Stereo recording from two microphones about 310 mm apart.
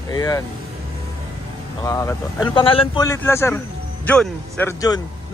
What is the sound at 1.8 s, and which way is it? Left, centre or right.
A man's voice, centre.